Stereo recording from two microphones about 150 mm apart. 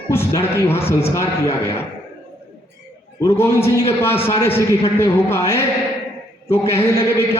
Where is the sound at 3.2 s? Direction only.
20° left (ahead or behind).